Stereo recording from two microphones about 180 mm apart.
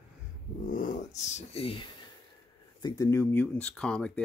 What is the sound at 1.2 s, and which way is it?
Speech, 35° left (ahead or behind).